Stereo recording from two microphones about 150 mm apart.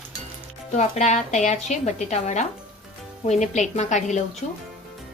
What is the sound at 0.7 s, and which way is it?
A woman's voice, 50° left (ahead or behind).